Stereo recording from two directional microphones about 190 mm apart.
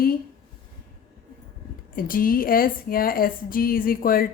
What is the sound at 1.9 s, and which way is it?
Speech, 50° left (ahead or behind).